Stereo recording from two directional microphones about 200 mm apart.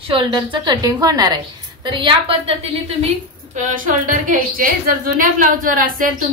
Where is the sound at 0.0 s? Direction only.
25° right (ahead or behind).